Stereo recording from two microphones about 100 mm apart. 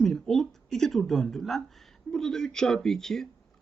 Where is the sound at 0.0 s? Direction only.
5° left (ahead or behind).